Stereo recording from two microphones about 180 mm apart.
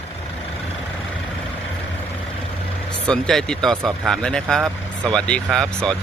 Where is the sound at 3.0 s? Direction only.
5° left (ahead or behind).